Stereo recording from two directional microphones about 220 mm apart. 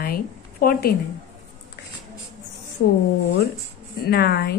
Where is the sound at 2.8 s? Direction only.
55° left (ahead or behind).